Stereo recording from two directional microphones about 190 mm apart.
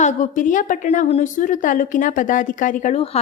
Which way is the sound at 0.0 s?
40° left (ahead or behind).